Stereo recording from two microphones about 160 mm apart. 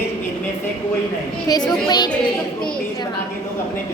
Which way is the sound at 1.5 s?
25° left (ahead or behind).